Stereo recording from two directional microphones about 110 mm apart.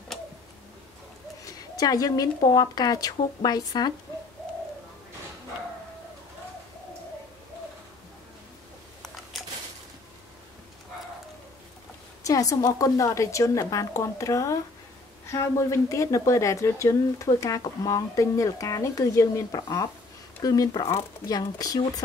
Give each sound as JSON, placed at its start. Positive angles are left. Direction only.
{"t": 1.4, "sound": "a woman's voice", "side_deg": 35}
{"t": 9.0, "sound": "a sound", "side_deg": 0}
{"t": 12.3, "sound": "a woman's voice", "side_deg": 30}